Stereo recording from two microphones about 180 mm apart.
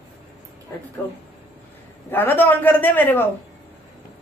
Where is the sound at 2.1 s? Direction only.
10° left (ahead or behind).